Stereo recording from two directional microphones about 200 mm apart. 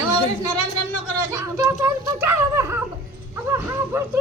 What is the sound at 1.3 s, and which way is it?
Speech, 15° right (ahead or behind).